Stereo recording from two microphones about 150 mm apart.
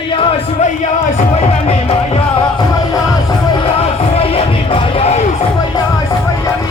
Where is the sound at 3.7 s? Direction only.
40° left (ahead or behind).